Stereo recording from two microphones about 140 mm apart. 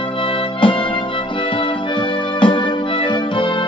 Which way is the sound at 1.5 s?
35° left (ahead or behind).